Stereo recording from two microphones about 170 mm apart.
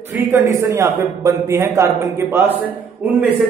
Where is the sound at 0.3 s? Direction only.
15° right (ahead or behind).